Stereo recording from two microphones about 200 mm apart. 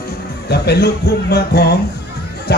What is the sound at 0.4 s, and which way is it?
Speech, 55° left (ahead or behind).